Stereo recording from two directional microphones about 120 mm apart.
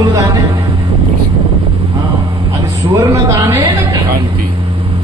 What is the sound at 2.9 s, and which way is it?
Speech, 25° right (ahead or behind).